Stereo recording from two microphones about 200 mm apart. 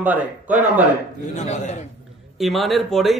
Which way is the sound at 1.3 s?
35° left (ahead or behind).